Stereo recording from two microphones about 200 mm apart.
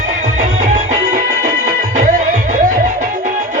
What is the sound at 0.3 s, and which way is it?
Music, 35° right (ahead or behind).